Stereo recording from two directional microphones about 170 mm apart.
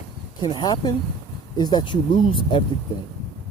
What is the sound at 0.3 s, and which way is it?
Speech, 25° left (ahead or behind).